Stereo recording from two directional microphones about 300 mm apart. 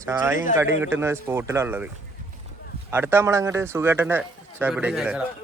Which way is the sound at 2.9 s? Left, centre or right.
Centre.